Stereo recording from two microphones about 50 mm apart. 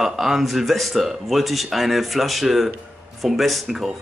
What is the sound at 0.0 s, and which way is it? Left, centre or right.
A man's voice, centre.